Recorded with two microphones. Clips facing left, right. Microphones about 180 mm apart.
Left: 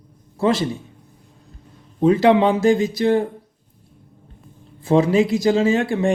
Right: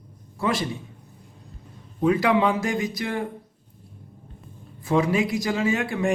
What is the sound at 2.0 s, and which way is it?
Speech, 30° left (ahead or behind).